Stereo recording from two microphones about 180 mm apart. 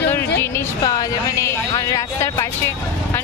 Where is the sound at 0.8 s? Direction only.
20° left (ahead or behind).